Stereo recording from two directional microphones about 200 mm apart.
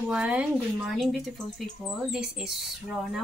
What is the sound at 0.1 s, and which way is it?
Speech, 5° right (ahead or behind).